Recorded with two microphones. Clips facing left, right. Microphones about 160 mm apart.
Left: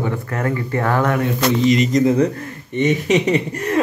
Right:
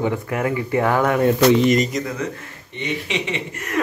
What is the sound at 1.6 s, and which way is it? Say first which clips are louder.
Speech: left 1 dB; 50° right (ahead or behind).